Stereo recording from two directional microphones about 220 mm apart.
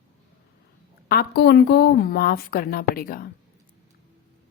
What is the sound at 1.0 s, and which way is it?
A woman's voice, 45° left (ahead or behind).